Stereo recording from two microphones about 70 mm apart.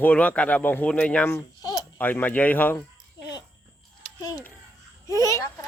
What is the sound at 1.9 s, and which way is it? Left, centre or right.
Speech, left.